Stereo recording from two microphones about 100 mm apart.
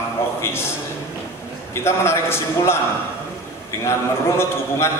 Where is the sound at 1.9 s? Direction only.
25° left (ahead or behind).